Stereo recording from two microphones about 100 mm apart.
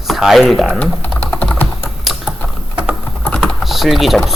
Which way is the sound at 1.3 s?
15° left (ahead or behind).